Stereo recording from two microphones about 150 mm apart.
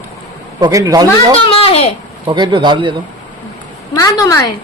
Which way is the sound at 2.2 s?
30° right (ahead or behind).